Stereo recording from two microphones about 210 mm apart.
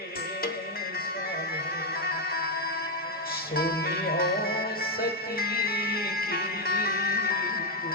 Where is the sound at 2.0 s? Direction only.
45° left (ahead or behind).